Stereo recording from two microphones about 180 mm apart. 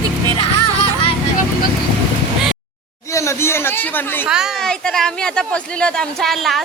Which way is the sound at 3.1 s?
15° left (ahead or behind).